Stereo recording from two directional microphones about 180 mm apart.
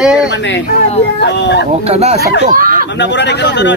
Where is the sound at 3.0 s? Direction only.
75° left (ahead or behind).